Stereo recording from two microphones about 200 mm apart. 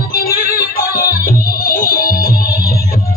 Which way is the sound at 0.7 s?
45° left (ahead or behind).